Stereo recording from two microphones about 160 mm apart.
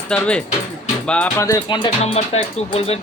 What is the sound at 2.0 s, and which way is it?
Speech, 40° left (ahead or behind).